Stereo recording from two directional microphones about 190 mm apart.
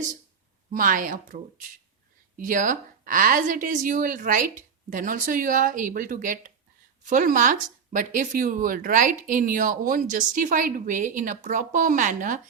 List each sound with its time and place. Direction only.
0.7 s speech: 45° right (ahead or behind)